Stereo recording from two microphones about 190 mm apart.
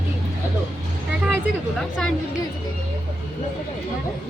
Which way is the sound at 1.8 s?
Centre (ahead or behind).